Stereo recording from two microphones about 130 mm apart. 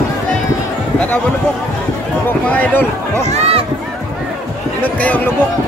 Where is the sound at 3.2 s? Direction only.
55° right (ahead or behind).